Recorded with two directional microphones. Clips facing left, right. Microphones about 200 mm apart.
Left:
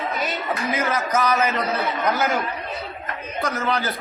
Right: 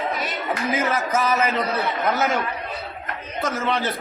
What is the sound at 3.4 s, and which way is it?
Speech, centre (ahead or behind).